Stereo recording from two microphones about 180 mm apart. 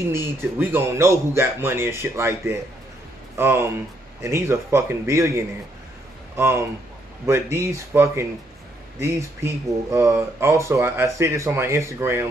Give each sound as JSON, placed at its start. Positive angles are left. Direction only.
{"t": 0.1, "sound": "speech", "side_deg": -10}